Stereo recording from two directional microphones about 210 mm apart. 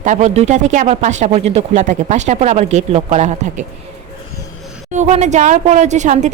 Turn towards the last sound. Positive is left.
turn(degrees=-35)  # may be behind; listen again after turning